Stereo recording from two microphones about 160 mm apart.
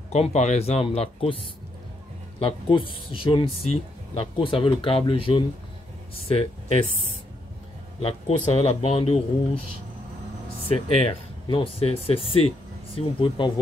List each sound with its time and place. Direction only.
0.1 s speech: 45° left (ahead or behind)
2.4 s speech: 35° left (ahead or behind)
8.0 s speech: 40° left (ahead or behind)
11.0 s speech: 35° left (ahead or behind)